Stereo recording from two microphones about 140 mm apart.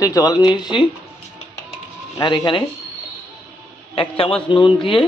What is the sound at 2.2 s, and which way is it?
Speech, 25° left (ahead or behind).